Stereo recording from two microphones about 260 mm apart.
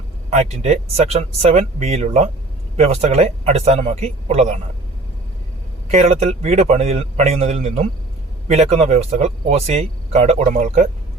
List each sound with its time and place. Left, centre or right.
0.3 s speech: right
5.9 s speech: right